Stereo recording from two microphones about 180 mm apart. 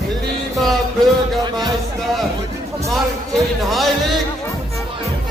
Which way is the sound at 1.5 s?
25° right (ahead or behind).